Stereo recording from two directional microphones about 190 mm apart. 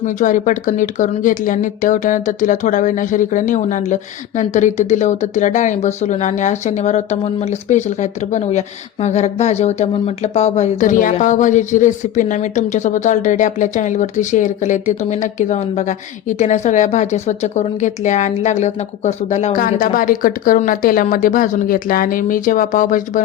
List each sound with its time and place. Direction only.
0.0 s speech: 40° left (ahead or behind)